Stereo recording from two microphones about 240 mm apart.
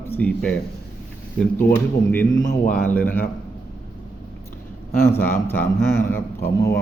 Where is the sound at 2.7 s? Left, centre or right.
Centre.